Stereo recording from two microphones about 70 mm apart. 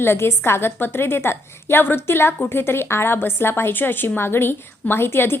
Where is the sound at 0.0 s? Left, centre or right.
Left.